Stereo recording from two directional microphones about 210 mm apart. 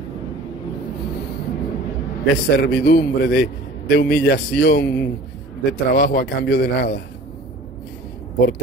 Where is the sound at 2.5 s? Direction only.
50° left (ahead or behind).